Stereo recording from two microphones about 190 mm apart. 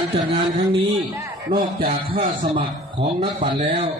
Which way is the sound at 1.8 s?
30° right (ahead or behind).